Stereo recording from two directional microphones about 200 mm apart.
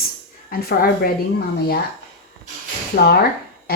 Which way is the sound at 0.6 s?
50° left (ahead or behind).